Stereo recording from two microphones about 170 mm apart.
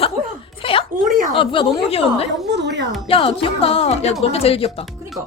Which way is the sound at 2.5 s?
90° right.